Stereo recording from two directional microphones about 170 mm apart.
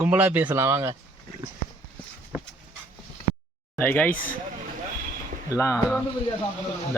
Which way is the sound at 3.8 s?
10° left (ahead or behind).